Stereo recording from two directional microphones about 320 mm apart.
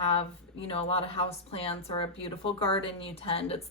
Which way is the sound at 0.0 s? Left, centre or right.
Centre.